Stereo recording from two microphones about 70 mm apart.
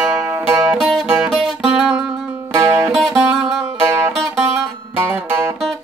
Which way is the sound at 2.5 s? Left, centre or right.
Right.